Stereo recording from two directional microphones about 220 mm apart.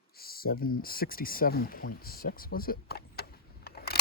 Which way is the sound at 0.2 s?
45° left (ahead or behind).